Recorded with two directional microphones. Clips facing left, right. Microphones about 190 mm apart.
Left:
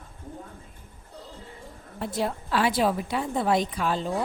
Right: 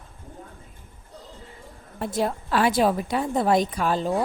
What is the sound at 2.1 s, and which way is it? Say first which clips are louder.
A woman's voice: right 3 dB; 50° right (ahead or behind).